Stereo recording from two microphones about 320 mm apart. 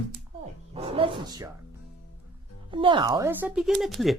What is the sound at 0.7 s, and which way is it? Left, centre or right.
Speech, centre.